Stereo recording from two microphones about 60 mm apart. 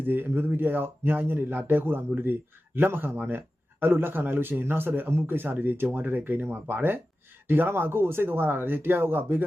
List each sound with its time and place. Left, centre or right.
0.0 s speech: right